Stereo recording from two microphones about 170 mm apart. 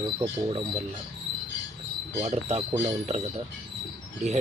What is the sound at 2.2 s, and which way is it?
Speech, 40° right (ahead or behind).